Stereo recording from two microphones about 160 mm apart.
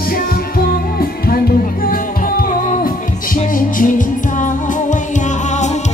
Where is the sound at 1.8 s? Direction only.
65° left (ahead or behind).